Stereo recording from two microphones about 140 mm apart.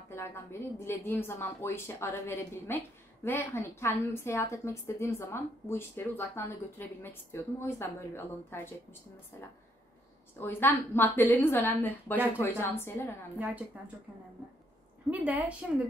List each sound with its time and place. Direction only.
0.1 s a woman's voice: 20° left (ahead or behind)
10.4 s a woman's voice: 15° left (ahead or behind)
13.7 s a woman's voice: 10° right (ahead or behind)
15.0 s a woman's voice: 10° right (ahead or behind)